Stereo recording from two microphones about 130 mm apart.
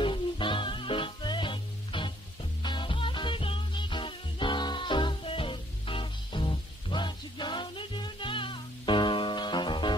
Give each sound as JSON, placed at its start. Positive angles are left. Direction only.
{"t": 0.0, "sound": "music", "side_deg": 40}